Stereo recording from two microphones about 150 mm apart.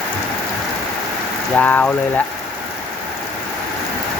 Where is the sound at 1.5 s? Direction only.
10° left (ahead or behind).